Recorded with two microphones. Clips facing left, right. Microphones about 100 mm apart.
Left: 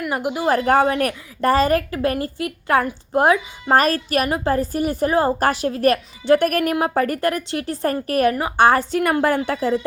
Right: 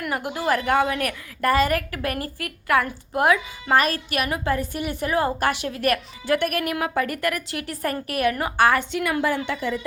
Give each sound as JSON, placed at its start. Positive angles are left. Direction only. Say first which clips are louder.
{"t": 0.1, "sound": "a woman's voice", "louder": "left 4 dB", "side_deg": 20}
{"t": 0.5, "sound": "a woman's voice", "louder": "left 4 dB", "side_deg": 40}
{"t": 8.4, "sound": "a woman's voice", "louder": "left 4 dB", "side_deg": 25}